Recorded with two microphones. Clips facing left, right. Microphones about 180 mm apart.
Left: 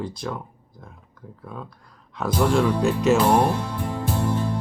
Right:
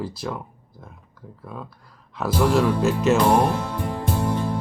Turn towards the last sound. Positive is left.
turn(degrees=-55)  # may be behind; listen again after turning